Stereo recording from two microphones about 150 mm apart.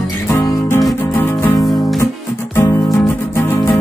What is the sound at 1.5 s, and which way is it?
Music, 25° left (ahead or behind).